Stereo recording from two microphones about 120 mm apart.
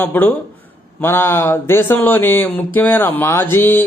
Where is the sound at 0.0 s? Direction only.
15° left (ahead or behind).